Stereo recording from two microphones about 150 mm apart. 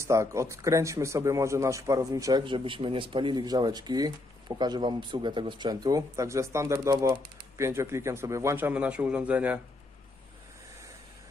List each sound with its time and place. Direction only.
0.0 s a man's voice: 20° right (ahead or behind)